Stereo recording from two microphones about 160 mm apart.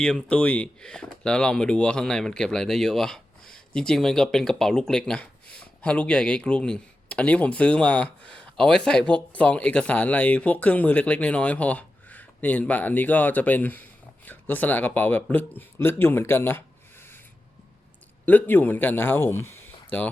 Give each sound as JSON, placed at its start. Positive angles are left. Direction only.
{"t": 0.0, "sound": "speech", "side_deg": 5}
{"t": 18.3, "sound": "speech", "side_deg": 10}